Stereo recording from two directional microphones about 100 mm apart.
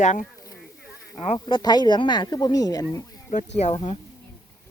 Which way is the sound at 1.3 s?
45° left (ahead or behind).